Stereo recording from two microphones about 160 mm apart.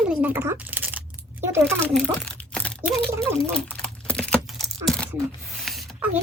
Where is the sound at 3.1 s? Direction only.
15° right (ahead or behind).